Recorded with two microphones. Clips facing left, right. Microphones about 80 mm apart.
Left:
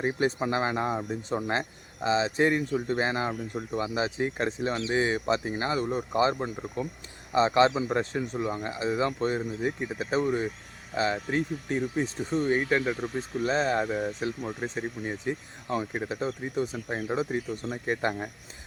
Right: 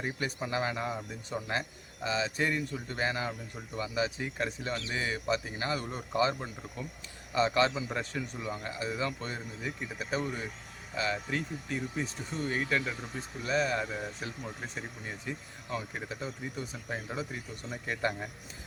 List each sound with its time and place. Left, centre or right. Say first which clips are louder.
0.0 s speech: left 8 dB; left
9.9 s speech: left 6 dB; left
15.3 s speech: left 6 dB; left